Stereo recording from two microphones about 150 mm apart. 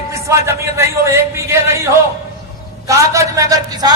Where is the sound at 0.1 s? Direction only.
20° right (ahead or behind).